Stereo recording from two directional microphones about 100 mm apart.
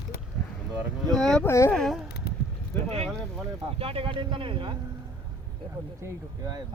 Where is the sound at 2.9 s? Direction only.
90° right.